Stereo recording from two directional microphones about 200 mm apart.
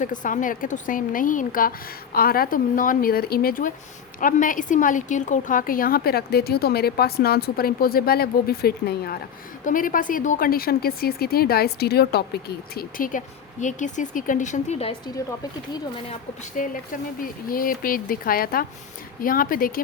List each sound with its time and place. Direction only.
0.0 s a woman's voice: 40° left (ahead or behind)
16.0 s speech: 40° left (ahead or behind)